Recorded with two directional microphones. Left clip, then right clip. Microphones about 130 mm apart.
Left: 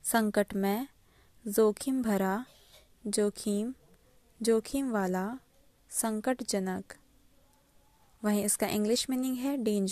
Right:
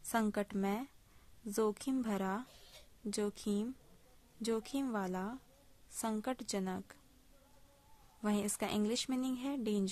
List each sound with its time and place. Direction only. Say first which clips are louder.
0.0 s speech: left 8 dB; 40° left (ahead or behind)
8.2 s speech: left 7 dB; 40° left (ahead or behind)